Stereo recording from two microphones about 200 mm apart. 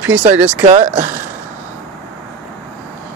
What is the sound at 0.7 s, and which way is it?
Speech, 35° right (ahead or behind).